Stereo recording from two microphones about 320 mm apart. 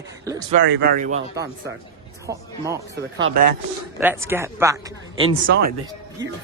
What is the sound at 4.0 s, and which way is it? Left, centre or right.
A man's voice, centre.